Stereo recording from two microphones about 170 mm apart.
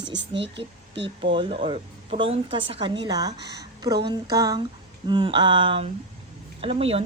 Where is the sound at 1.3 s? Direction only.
30° right (ahead or behind).